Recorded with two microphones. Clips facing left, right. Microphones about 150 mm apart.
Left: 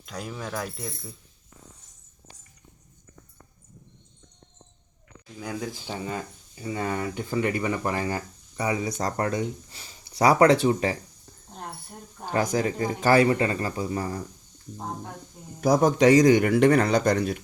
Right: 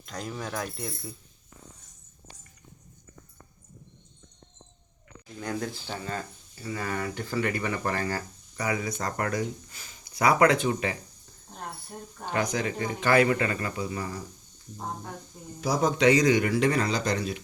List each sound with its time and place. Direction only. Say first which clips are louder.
0.0 s speech: even; 5° left (ahead or behind)
5.4 s speech: even; 10° left (ahead or behind); by 10.9 s 35° left (ahead or behind)
12.3 s speech: left 4 dB; 40° left (ahead or behind)
15.6 s speech: left 4 dB; 50° left (ahead or behind)